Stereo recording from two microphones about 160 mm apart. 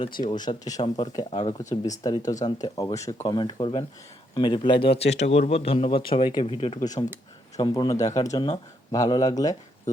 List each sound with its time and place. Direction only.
0.3 s speech: 25° left (ahead or behind)
4.9 s speech: 40° left (ahead or behind)
6.7 s speech: 25° left (ahead or behind)